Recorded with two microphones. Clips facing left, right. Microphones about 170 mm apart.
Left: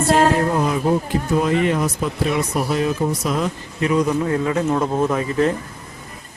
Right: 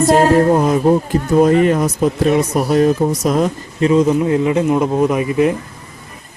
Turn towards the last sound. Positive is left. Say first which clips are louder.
# right 4 dB
turn(degrees=-15)  # may be behind; listen again after turning